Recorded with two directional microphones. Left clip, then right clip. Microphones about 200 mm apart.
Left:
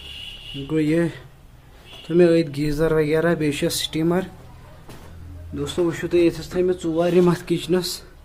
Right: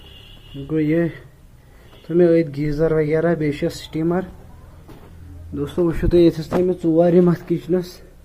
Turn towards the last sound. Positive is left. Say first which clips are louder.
# right 1 dB
turn(degrees=-5)  # may be behind; listen again after turning